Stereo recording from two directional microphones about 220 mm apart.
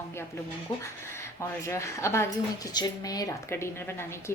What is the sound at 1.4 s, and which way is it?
Speech, 15° left (ahead or behind).